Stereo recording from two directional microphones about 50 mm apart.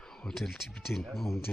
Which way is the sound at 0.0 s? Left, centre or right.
Centre.